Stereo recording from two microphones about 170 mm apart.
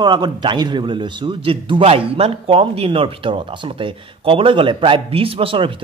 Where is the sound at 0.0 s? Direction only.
25° right (ahead or behind).